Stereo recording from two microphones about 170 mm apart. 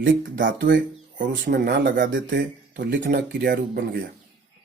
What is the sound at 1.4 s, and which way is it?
Speech, 55° right (ahead or behind).